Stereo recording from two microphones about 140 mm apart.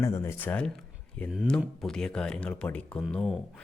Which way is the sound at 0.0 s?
20° left (ahead or behind).